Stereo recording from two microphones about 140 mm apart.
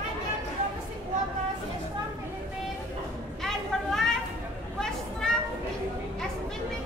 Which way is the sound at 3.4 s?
5° left (ahead or behind).